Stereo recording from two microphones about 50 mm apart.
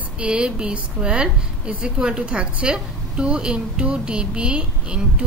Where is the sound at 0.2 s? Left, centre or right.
Right.